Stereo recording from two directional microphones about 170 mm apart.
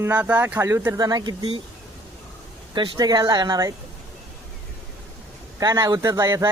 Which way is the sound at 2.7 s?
30° right (ahead or behind).